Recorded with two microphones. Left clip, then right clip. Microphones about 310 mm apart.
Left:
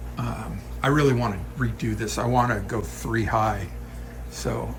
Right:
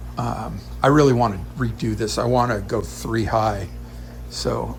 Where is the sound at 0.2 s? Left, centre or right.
Centre.